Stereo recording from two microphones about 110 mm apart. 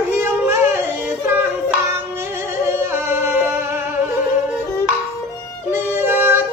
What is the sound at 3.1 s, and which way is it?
Music, 20° right (ahead or behind).